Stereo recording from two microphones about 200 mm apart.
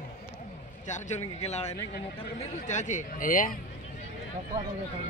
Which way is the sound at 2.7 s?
35° left (ahead or behind).